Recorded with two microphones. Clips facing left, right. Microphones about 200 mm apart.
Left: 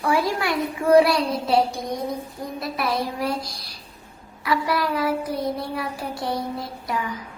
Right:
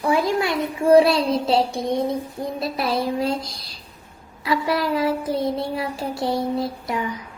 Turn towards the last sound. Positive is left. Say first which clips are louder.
# right 2 dB
turn(degrees=-20)  # may be behind; listen again after turning